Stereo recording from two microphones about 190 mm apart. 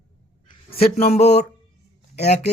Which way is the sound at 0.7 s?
50° left (ahead or behind).